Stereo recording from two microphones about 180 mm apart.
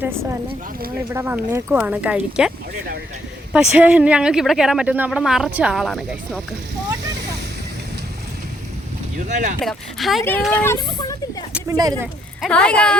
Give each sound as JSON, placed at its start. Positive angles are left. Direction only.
{"t": 0.0, "sound": "speech", "side_deg": -15}
{"t": 3.5, "sound": "speech", "side_deg": -5}
{"t": 9.1, "sound": "speech", "side_deg": -45}
{"t": 9.6, "sound": "speech", "side_deg": 0}
{"t": 10.5, "sound": "speech", "side_deg": 10}
{"t": 11.8, "sound": "speech", "side_deg": -20}
{"t": 12.4, "sound": "speech", "side_deg": 5}